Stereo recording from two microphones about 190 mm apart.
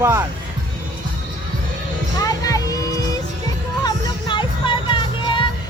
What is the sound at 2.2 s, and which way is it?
Music, 20° left (ahead or behind).